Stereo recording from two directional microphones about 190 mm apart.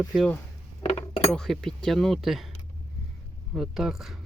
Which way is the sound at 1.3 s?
5° left (ahead or behind).